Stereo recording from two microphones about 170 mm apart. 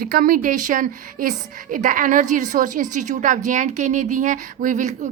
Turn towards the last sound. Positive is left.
turn(degrees=-45)  # may be behind; listen again after turning